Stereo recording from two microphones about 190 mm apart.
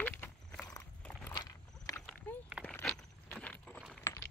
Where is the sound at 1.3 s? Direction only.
20° left (ahead or behind).